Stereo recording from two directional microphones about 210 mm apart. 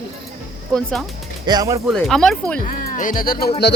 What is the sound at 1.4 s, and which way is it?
Speech, 20° right (ahead or behind).